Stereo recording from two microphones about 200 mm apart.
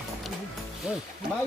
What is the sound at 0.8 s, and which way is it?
Speech, 5° right (ahead or behind).